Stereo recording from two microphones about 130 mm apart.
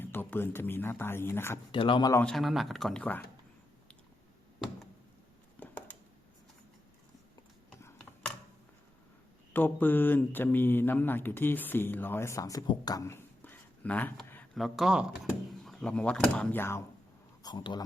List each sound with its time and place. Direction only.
0.0 s speech: 15° left (ahead or behind)
1.7 s speech: 40° left (ahead or behind)
2.2 s speech: centre (ahead or behind)
5.5 s a sound: 10° left (ahead or behind)
9.5 s speech: 15° left (ahead or behind)
12.6 s a sound: 30° left (ahead or behind); by 14.4 s 15° left (ahead or behind)
14.5 s speech: centre (ahead or behind); by 16.8 s 20° left (ahead or behind)
17.4 s speech: 35° left (ahead or behind)